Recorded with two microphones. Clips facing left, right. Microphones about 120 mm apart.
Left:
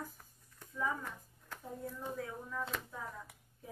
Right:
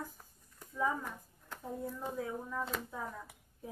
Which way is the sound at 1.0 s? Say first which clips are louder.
Right 2 dB; 5° right (ahead or behind).